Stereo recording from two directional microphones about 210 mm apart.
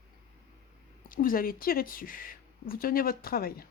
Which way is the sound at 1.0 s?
40° left (ahead or behind).